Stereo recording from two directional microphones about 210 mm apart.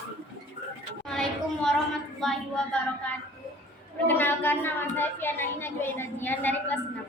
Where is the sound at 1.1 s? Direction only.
5° left (ahead or behind).